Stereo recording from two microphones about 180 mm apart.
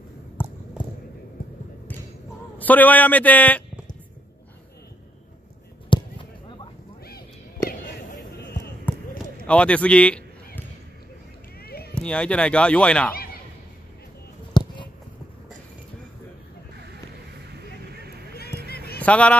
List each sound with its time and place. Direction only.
0.8 s basketball bounce: 5° right (ahead or behind)
2.6 s speech: 10° left (ahead or behind)
5.9 s a sound: 25° left (ahead or behind)
8.9 s basketball bounce: 10° left (ahead or behind)
9.5 s speech: 5° left (ahead or behind)
11.6 s run: 60° left (ahead or behind)
11.9 s speech: 5° left (ahead or behind)
14.5 s a sound: 25° left (ahead or behind)
16.7 s a sound: 65° right (ahead or behind)
18.9 s speech: 5° left (ahead or behind)